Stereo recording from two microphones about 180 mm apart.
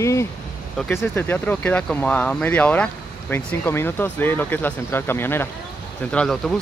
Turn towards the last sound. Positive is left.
turn(degrees=0)  # may be behind; listen again after turning